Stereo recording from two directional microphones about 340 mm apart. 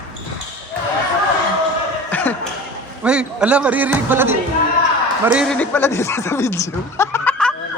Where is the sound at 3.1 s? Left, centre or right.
Centre.